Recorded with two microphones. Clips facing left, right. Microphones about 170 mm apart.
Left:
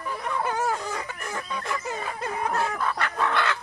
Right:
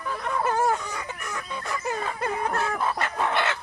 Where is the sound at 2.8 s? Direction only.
20° right (ahead or behind).